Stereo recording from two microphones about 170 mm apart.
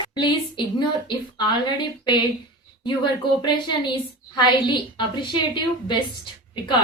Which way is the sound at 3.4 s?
25° left (ahead or behind).